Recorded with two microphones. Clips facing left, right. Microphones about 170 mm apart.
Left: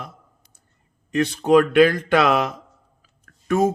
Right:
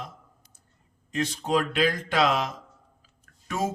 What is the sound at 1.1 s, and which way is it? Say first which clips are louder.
Mantra: left 10 dB; 65° left (ahead or behind).